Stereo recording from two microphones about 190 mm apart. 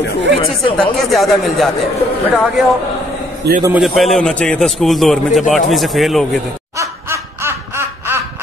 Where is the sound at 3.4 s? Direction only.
60° right (ahead or behind).